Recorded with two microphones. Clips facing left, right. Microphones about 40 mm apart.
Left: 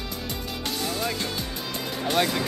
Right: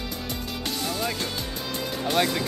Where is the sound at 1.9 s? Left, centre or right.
Centre.